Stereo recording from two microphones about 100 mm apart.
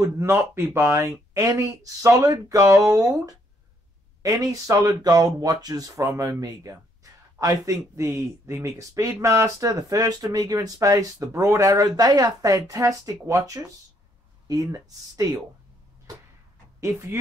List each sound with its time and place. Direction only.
0.0 s speech: 30° right (ahead or behind)
4.2 s speech: 35° right (ahead or behind)
16.8 s speech: 30° right (ahead or behind)